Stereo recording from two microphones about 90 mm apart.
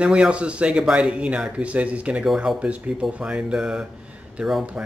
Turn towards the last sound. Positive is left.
turn(degrees=0)  # may be behind; listen again after turning